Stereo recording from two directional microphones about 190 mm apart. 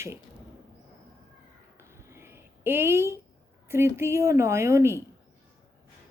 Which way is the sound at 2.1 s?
15° right (ahead or behind).